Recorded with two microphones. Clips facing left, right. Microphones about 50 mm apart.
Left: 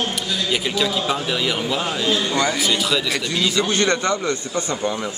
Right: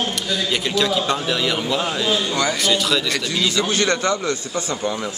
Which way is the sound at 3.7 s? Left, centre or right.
Left.